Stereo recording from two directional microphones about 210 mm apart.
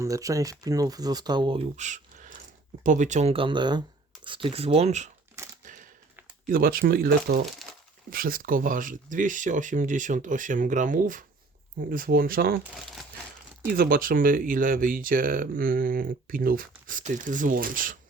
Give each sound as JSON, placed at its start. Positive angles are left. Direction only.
{"t": 0.0, "sound": "speech", "side_deg": -15}
{"t": 5.4, "sound": "a sound", "side_deg": -15}
{"t": 6.5, "sound": "speech", "side_deg": -45}
{"t": 7.6, "sound": "crumpling", "side_deg": 0}
{"t": 8.1, "sound": "speech", "side_deg": -45}
{"t": 13.7, "sound": "speech", "side_deg": -45}